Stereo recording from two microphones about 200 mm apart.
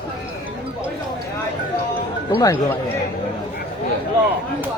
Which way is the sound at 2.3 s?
20° left (ahead or behind).